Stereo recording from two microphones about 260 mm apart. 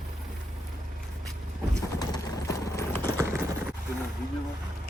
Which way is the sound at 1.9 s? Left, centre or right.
Centre.